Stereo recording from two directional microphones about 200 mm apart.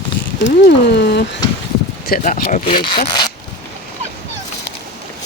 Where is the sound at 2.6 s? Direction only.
25° left (ahead or behind).